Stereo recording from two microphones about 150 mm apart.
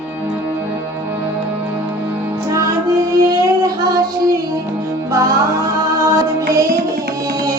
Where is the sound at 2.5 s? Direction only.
20° right (ahead or behind).